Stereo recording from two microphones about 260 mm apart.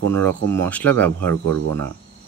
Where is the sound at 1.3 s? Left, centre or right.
Right.